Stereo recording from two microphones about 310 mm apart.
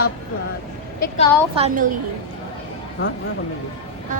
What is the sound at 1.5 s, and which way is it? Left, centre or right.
Speech, right.